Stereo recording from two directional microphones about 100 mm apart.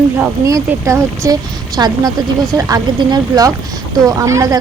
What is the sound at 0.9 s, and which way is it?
A woman's voice, 30° right (ahead or behind).